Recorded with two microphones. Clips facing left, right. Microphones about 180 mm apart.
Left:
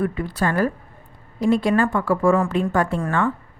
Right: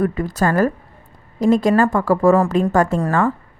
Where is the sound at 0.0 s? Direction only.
40° right (ahead or behind).